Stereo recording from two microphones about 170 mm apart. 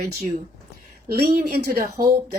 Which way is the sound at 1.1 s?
65° right (ahead or behind).